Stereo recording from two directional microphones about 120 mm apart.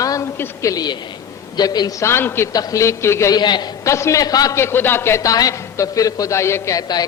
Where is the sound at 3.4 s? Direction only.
35° left (ahead or behind).